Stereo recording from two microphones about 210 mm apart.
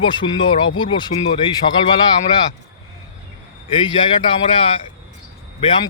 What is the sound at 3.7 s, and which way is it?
A man's voice, 20° left (ahead or behind).